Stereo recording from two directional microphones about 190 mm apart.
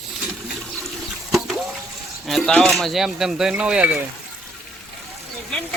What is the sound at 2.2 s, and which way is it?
Speech, centre (ahead or behind).